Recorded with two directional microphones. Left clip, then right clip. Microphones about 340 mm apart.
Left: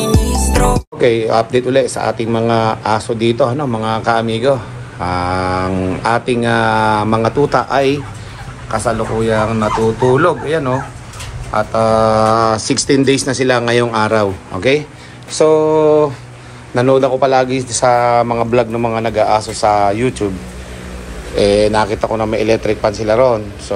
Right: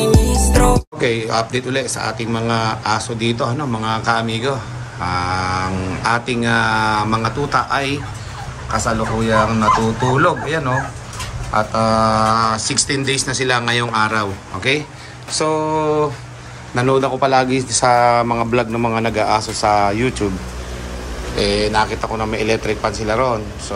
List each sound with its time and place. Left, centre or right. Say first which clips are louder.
0.0 s a man's voice: even; centre
21.4 s speech: left 5 dB; centre